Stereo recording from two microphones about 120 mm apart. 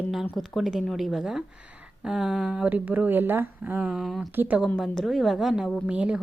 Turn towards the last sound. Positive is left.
turn(degrees=-10)  # may be behind; listen again after turning